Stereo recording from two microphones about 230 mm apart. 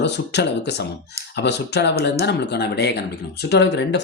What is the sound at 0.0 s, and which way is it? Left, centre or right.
Speech, left.